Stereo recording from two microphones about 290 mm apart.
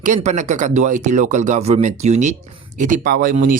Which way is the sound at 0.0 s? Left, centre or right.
Right.